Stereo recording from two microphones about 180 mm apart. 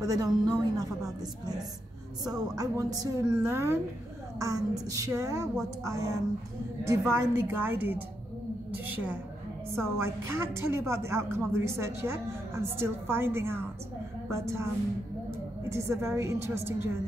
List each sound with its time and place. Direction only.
0.0 s a woman's voice: 20° right (ahead or behind)
15.7 s a woman's voice: 15° right (ahead or behind)